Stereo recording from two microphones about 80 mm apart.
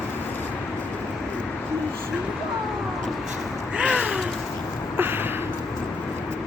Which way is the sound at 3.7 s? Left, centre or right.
Centre.